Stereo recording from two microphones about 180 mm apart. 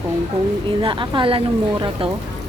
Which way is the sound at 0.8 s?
25° right (ahead or behind).